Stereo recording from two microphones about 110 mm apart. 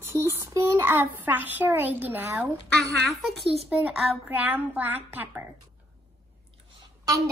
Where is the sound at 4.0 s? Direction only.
15° right (ahead or behind).